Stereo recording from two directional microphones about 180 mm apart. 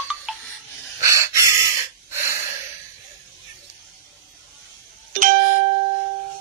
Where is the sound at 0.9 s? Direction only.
15° right (ahead or behind).